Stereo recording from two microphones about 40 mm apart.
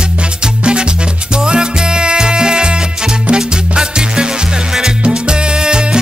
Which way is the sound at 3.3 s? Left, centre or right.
Right.